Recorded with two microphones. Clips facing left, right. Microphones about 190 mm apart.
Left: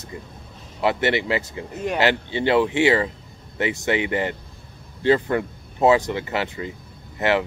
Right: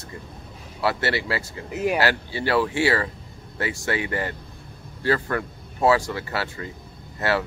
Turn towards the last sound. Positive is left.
turn(degrees=20)  # may be behind; listen again after turning